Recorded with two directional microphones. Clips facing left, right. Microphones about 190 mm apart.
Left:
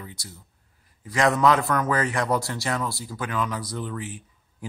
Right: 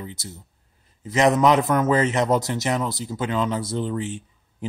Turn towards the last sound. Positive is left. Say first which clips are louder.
# right 6 dB
turn(degrees=-25)  # may be behind; listen again after turning